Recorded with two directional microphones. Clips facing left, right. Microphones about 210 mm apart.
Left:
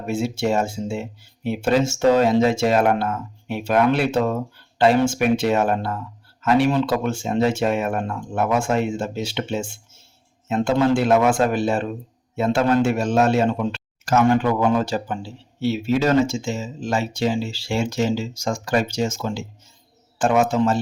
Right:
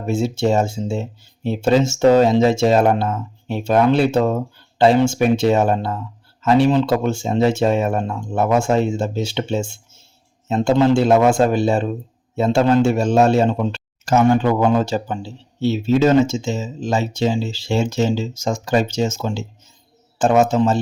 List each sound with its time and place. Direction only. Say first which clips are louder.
0.0 s speech: right 4 dB; 25° right (ahead or behind)